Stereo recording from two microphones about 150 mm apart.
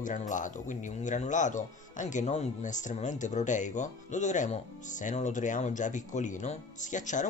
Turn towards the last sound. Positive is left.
turn(degrees=55)  # may be behind; listen again after turning